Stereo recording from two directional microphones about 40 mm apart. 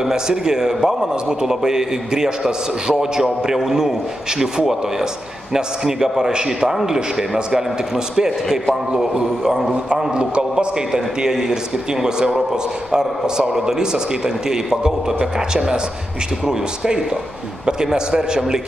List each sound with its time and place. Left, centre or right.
0.0 s a man's voice: centre
10.1 s a man's voice: right
10.9 s a man's voice: centre